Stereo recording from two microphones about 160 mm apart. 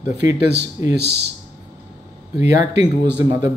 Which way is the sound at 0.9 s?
90° right.